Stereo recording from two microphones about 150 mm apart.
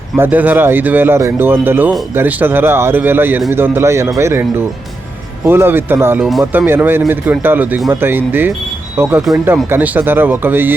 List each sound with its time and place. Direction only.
0.2 s speech: 10° right (ahead or behind)